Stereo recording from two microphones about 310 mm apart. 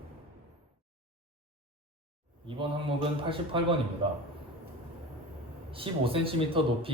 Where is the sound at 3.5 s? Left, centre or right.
Centre.